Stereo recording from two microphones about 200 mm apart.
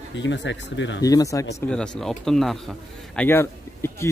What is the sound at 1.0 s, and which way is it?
Speech, 15° left (ahead or behind).